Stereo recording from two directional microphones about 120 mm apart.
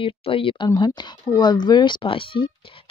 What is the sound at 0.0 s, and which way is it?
Speech, 50° left (ahead or behind).